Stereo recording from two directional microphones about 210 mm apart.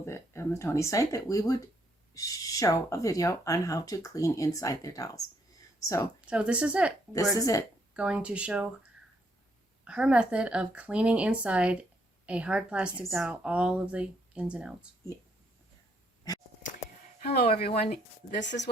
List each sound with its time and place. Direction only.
0.0 s speech: 15° left (ahead or behind)
6.2 s speech: 5° right (ahead or behind)
7.3 s speech: 15° left (ahead or behind)
7.9 s speech: 5° right (ahead or behind)
9.8 s speech: 5° right (ahead or behind)
17.2 s a sound: 50° left (ahead or behind)
17.9 s speech: 55° left (ahead or behind)